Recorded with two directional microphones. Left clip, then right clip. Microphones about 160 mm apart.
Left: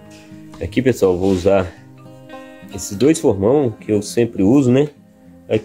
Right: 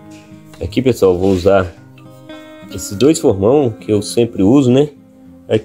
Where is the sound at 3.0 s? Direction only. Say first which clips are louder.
Right 3 dB; 15° right (ahead or behind).